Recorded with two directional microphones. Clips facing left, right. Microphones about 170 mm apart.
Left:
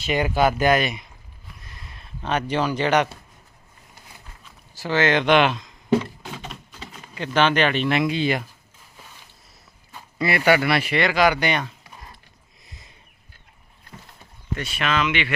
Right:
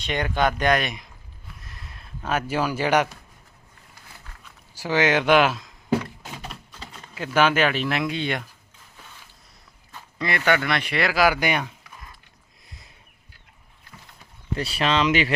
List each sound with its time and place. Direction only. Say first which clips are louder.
0.0 s speech: left 3 dB; 10° left (ahead or behind)
1.5 s a sound: left 1 dB; centre (ahead or behind)
4.7 s a sound: left 1 dB; 10° right (ahead or behind)
7.3 s speech: left 1 dB; 5° right (ahead or behind)
9.9 s speech: left 4 dB; 10° left (ahead or behind); by 11.7 s 10° right (ahead or behind)
12.6 s sniff: left 1 dB; centre (ahead or behind)
14.5 s speech: right 2 dB; 35° right (ahead or behind)